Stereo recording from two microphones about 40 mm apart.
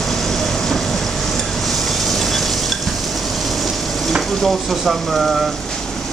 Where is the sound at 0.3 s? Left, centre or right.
Centre.